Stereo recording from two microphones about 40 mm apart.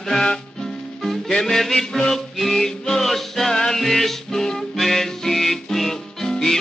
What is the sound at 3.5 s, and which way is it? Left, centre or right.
Music, centre.